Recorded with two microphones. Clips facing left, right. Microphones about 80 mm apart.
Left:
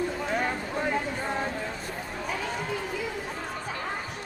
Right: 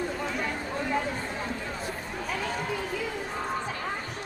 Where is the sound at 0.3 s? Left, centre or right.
Left.